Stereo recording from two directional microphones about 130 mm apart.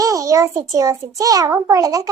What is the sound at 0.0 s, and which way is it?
A child's voice, 25° right (ahead or behind).